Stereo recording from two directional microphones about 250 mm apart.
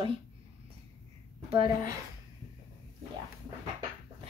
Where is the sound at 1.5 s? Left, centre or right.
Right.